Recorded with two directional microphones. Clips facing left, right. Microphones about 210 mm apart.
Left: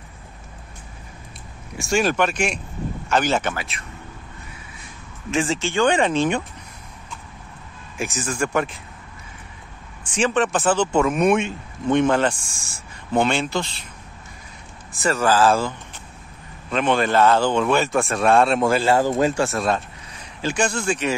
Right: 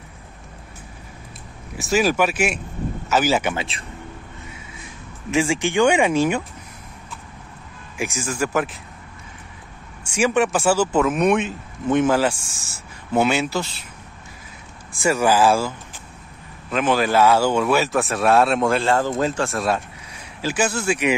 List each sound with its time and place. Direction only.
1.8 s speech: 5° right (ahead or behind)
3.5 s speech: 30° right (ahead or behind)
5.3 s speech: 10° right (ahead or behind)
8.0 s speech: 10° right (ahead or behind)
10.0 s speech: 10° right (ahead or behind)
14.9 s speech: 10° right (ahead or behind)
16.7 s speech: 5° right (ahead or behind)